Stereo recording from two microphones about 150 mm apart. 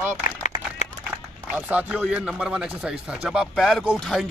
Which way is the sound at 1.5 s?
10° right (ahead or behind).